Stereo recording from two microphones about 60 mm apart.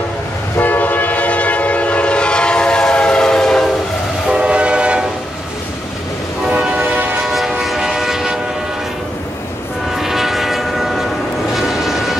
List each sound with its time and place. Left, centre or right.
0.6 s train: left; by 3.6 s centre
4.3 s train: centre
7.2 s train: centre
9.9 s train: centre
11.5 s vehicle: centre